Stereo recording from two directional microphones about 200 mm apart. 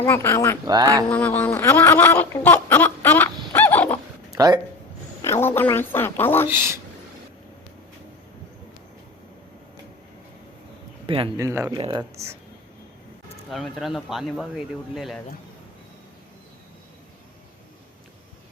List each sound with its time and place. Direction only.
0.0 s a woman's voice: 10° left (ahead or behind)
0.7 s speech: 20° right (ahead or behind)
1.1 s speech: 10° left (ahead or behind)
4.3 s a sound: 20° right (ahead or behind)
5.2 s a woman's voice: 10° left (ahead or behind)
6.5 s speech: 10° right (ahead or behind)
11.0 s a sound: 25° right (ahead or behind)
11.3 s speech: 15° right (ahead or behind)
13.5 s speech: centre (ahead or behind)